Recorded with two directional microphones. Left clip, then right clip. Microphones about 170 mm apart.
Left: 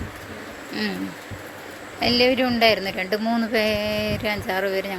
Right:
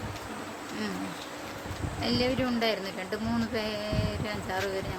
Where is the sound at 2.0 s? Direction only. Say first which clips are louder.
Left 10 dB; 40° left (ahead or behind).